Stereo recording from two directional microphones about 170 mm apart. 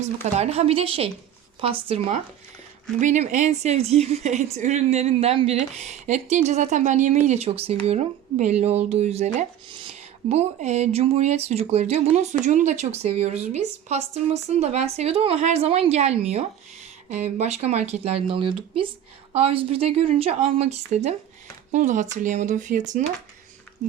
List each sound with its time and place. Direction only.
0.0 s a woman's voice: 40° right (ahead or behind)